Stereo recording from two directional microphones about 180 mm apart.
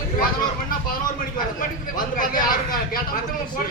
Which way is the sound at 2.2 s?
50° left (ahead or behind).